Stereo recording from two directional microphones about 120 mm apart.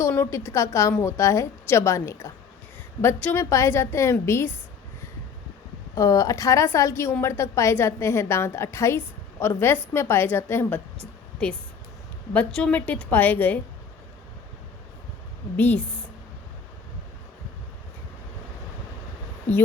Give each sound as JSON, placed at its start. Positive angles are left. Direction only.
{"t": 0.1, "sound": "a woman's voice", "side_deg": 20}
{"t": 3.3, "sound": "a woman's voice", "side_deg": 25}
{"t": 5.9, "sound": "a woman's voice", "side_deg": 30}
{"t": 12.3, "sound": "a woman's voice", "side_deg": 10}
{"t": 15.5, "sound": "a woman's voice", "side_deg": 15}